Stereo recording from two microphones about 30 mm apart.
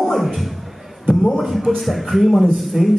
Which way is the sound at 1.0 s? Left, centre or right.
Left.